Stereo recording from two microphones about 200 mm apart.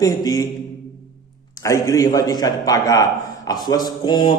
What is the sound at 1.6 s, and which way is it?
A man's voice, 15° left (ahead or behind).